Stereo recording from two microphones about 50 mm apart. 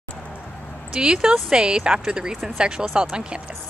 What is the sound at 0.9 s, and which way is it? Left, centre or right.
Speech, centre.